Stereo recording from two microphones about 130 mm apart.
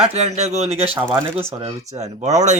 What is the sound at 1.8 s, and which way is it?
Speech, 60° right (ahead or behind).